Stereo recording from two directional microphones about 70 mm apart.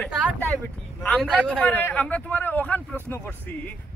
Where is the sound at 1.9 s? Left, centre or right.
Left.